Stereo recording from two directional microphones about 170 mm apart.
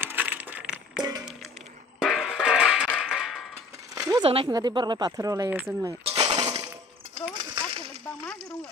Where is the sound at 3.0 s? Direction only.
5° right (ahead or behind).